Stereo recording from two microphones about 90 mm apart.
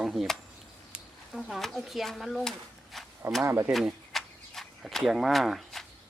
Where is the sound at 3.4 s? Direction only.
30° right (ahead or behind).